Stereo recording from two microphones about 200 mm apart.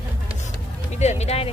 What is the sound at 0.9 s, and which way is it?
Speech, 35° left (ahead or behind).